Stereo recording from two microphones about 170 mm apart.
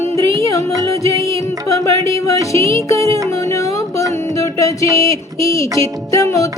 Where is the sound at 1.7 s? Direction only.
20° left (ahead or behind).